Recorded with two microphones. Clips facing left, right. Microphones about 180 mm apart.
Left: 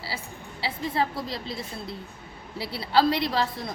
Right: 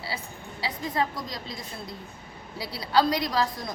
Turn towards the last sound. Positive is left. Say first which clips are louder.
# even
turn(degrees=30)  # may be behind; listen again after turning